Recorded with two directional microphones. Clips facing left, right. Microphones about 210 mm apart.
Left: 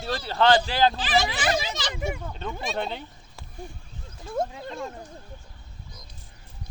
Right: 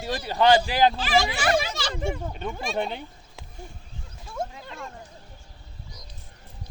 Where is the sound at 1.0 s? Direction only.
20° left (ahead or behind).